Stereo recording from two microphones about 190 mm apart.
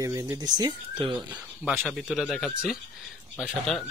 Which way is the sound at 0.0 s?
15° right (ahead or behind).